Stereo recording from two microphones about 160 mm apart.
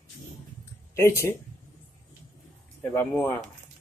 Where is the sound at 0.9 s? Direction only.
15° left (ahead or behind).